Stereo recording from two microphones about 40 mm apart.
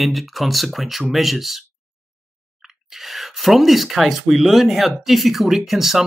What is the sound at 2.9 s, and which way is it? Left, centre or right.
Speech, centre.